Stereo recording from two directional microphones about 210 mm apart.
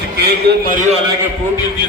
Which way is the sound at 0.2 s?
45° right (ahead or behind).